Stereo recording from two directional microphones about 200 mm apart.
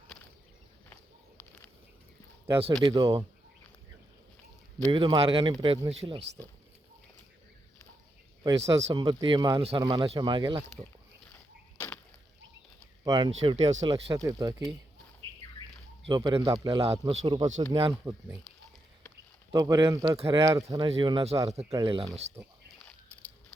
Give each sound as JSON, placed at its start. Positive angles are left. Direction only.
{"t": 2.8, "sound": "speech", "side_deg": -15}
{"t": 4.9, "sound": "speech", "side_deg": -25}
{"t": 8.4, "sound": "speech", "side_deg": -15}
{"t": 13.1, "sound": "speech", "side_deg": -20}
{"t": 14.1, "sound": "speech", "side_deg": -15}
{"t": 16.0, "sound": "speech", "side_deg": -20}
{"t": 17.7, "sound": "speech", "side_deg": -25}
{"t": 18.0, "sound": "speech", "side_deg": -15}